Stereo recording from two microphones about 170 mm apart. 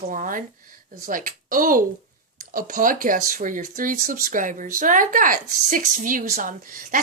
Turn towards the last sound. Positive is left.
turn(degrees=-55)  # may be behind; listen again after turning